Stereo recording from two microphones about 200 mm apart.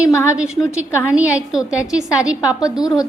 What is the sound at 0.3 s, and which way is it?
A woman's voice, 5° right (ahead or behind).